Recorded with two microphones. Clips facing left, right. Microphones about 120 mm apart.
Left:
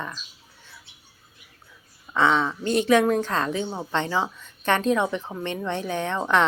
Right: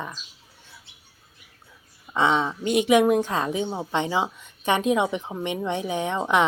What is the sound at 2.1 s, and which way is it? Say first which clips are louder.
A woman's voice: left 1 dB; 20° right (ahead or behind).